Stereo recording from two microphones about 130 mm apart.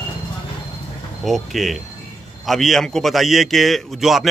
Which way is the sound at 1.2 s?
Centre (ahead or behind).